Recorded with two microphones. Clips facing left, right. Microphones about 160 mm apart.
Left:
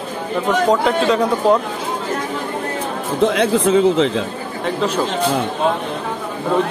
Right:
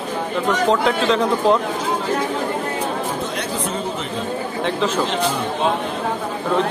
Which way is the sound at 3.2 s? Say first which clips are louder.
Left 9 dB; 90° left.